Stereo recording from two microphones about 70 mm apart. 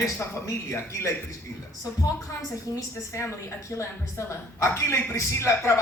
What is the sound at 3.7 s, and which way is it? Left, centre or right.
A woman's voice, left.